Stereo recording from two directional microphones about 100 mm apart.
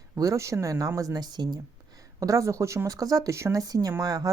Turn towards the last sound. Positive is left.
turn(degrees=-35)  # may be behind; listen again after turning